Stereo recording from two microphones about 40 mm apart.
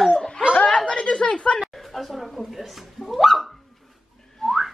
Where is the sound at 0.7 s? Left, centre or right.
Left.